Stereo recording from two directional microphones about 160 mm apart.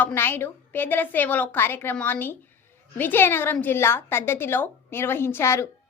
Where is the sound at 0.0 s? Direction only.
15° left (ahead or behind).